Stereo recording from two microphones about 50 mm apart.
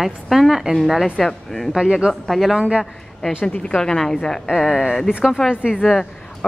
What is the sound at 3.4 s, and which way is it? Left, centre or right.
A woman's voice, left.